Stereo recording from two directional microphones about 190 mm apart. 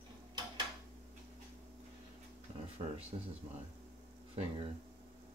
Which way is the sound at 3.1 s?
30° right (ahead or behind).